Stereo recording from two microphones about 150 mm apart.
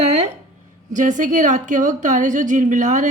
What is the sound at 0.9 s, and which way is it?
A woman's voice, 60° right (ahead or behind).